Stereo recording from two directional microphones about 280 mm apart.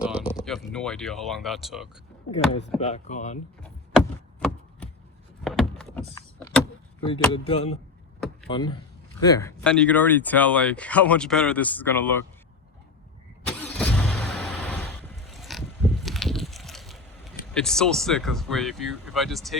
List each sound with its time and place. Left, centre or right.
0.0 s speech: centre
2.3 s chopping: left
4.4 s chopping: centre
5.4 s door: centre
7.1 s chopping: centre
8.4 s speech: centre
13.5 s vehicle: centre